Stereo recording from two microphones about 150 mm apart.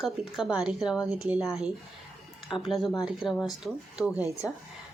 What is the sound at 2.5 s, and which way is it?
Speech, centre (ahead or behind).